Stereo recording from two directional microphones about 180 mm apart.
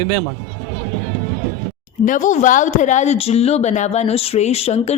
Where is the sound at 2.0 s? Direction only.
45° left (ahead or behind).